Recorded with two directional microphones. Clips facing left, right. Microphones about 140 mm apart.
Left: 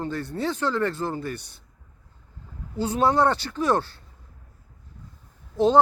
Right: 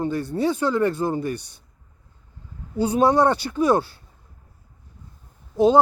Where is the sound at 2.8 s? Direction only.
15° right (ahead or behind).